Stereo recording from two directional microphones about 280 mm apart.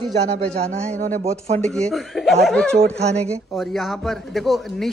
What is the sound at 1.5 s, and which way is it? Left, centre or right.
A woman's voice, centre.